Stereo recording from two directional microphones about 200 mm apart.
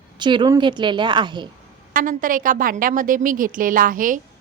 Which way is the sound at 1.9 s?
45° right (ahead or behind).